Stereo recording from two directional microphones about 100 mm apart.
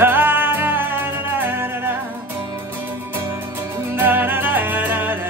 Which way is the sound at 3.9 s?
20° right (ahead or behind).